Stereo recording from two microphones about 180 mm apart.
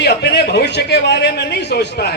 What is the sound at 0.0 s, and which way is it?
A man's voice, 65° left (ahead or behind).